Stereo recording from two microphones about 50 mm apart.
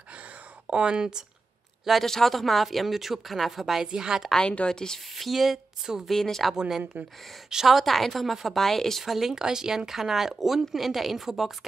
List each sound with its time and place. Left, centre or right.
0.7 s speech: centre
1.9 s a woman's voice: centre
4.4 s a woman's voice: centre
5.1 s a woman's voice: centre
6.0 s a woman's voice: centre
6.9 s speech: right
7.4 s a woman's voice: centre